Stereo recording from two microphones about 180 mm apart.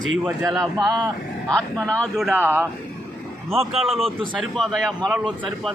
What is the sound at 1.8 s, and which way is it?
Speech, 5° left (ahead or behind).